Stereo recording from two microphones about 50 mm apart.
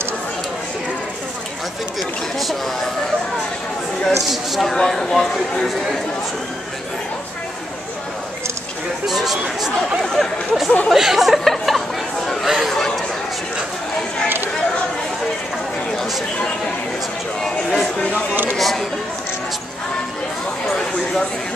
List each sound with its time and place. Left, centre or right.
2.0 s speech: centre
4.6 s speech: centre
9.0 s a sound: centre
9.8 s speech: centre
12.4 s chatter: centre
17.4 s speech: centre
18.3 s speech: right
18.6 s speech: centre
20.6 s a sound: centre